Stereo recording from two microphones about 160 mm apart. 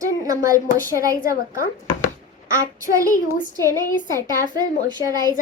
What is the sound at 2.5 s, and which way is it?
Speech, 20° right (ahead or behind).